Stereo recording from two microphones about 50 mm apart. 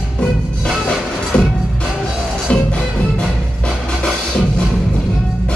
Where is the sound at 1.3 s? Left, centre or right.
Left.